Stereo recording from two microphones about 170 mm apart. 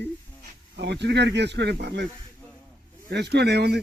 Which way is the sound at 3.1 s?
75° right (ahead or behind).